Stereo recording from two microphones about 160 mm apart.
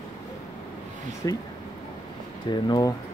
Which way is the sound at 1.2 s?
25° left (ahead or behind).